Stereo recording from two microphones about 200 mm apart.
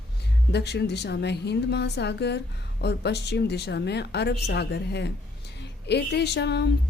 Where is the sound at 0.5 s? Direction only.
55° left (ahead or behind).